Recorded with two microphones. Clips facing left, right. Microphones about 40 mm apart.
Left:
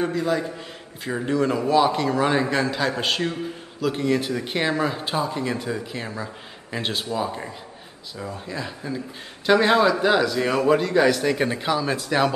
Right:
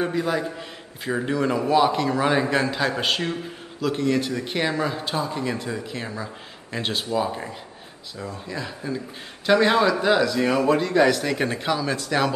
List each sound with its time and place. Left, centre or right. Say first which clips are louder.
0.0 s a man's voice: left 1 dB; right
0.6 s a man's voice: right 1 dB; centre
4.0 s a man's voice: even; centre
8.2 s a man's voice: left 1 dB; centre